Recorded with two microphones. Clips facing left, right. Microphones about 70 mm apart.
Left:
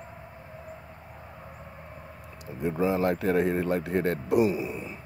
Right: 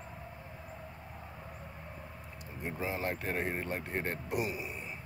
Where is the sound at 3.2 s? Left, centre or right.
Left.